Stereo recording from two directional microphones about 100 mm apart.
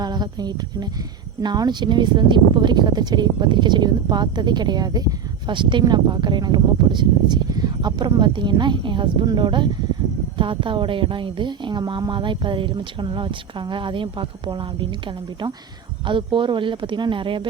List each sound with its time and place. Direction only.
0.0 s speech: 45° right (ahead or behind)